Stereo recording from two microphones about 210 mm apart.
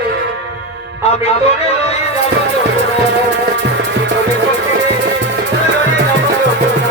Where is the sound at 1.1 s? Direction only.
30° left (ahead or behind).